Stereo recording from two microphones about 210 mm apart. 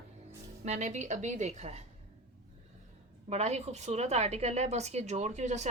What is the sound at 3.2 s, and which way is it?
A woman's voice, 30° right (ahead or behind).